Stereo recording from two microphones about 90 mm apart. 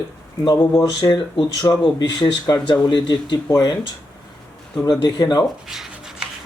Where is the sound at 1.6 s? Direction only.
55° left (ahead or behind).